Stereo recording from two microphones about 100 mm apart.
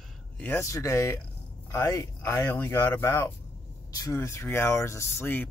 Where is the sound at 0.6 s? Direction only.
30° left (ahead or behind).